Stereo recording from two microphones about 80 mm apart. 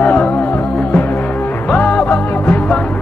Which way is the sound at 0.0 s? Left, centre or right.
Centre.